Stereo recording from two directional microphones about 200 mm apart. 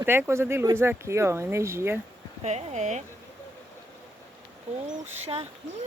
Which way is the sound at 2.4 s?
35° right (ahead or behind).